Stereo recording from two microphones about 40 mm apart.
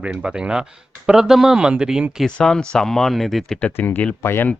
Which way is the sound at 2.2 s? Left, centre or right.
Centre.